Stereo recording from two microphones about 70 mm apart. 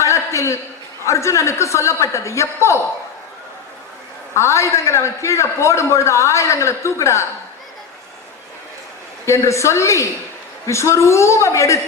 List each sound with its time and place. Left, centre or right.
0.0 s a sound: left
1.0 s a man's voice: left
4.4 s a man's voice: left
9.2 s a man's voice: left